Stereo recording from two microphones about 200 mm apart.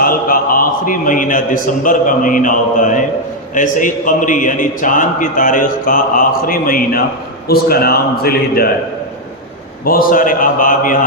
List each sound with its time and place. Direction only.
0.0 s a man's voice: 45° left (ahead or behind)
9.8 s a man's voice: 45° left (ahead or behind)